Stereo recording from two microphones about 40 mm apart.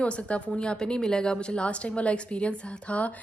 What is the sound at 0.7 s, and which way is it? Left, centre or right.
A woman's voice, centre.